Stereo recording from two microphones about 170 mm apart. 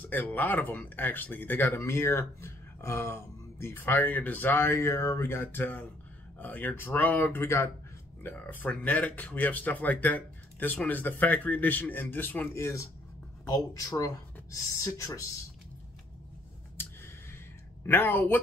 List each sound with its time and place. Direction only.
0.0 s speech: 10° left (ahead or behind)
16.7 s a sound: 15° left (ahead or behind)
17.8 s speech: 10° left (ahead or behind)